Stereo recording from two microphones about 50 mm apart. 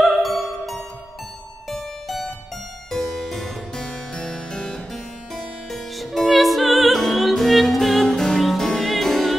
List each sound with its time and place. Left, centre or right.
0.0 s music: centre
2.9 s harpsichord: centre
3.8 s music: centre
4.9 s harpsichord: centre
6.1 s music: centre